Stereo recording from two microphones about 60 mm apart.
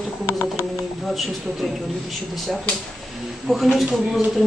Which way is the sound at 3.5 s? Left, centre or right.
Centre.